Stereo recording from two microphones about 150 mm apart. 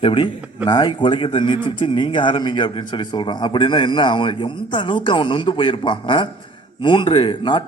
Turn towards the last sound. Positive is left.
turn(degrees=35)  # may be behind; listen again after turning